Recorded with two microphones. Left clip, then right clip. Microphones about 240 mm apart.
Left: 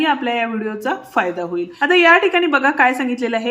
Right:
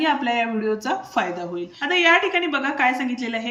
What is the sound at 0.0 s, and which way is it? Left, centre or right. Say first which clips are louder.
Speech: left 3 dB; centre.